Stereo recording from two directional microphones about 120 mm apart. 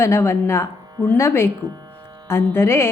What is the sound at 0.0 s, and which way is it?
Speech, 20° left (ahead or behind).